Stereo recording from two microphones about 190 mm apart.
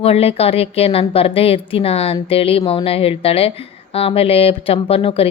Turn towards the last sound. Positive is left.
turn(degrees=30)  # may be behind; listen again after turning